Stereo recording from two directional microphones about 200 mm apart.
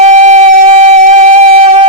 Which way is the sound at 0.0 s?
35° right (ahead or behind).